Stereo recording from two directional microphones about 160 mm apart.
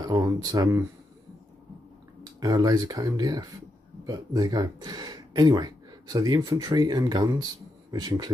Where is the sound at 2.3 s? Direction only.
25° right (ahead or behind).